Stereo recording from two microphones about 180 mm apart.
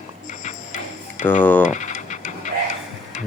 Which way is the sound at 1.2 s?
10° left (ahead or behind).